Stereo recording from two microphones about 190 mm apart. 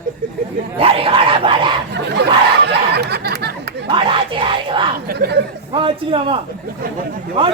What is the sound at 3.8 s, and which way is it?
Speech, 25° right (ahead or behind).